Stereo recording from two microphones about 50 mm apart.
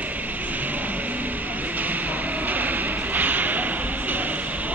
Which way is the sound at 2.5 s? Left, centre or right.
Right.